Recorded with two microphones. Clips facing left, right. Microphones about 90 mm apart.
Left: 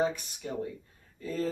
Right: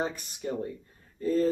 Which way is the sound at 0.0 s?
40° right (ahead or behind).